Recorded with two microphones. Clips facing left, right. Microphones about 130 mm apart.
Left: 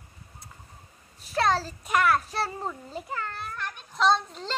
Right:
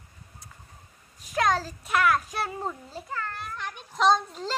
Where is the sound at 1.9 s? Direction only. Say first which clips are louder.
Even; centre (ahead or behind).